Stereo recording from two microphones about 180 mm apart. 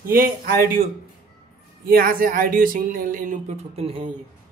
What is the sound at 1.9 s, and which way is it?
Speech, 55° right (ahead or behind).